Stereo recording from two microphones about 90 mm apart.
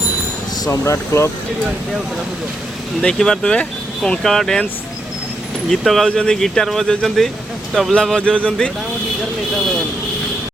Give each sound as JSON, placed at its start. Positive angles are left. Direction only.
{"t": 0.6, "sound": "speech", "side_deg": 35}
{"t": 3.0, "sound": "speech", "side_deg": 10}
{"t": 5.7, "sound": "speech", "side_deg": 0}